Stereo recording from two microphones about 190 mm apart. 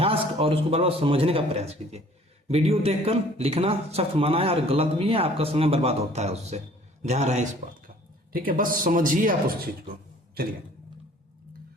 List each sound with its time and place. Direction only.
0.0 s a man's voice: 30° right (ahead or behind)
8.3 s speech: 50° right (ahead or behind)